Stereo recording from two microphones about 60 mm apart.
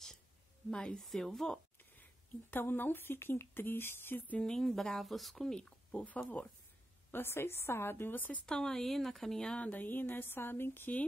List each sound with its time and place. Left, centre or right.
0.7 s speech: centre
2.5 s speech: left
4.4 s speech: centre
5.5 s speech: centre
7.1 s speech: left
8.5 s speech: centre
9.6 s speech: left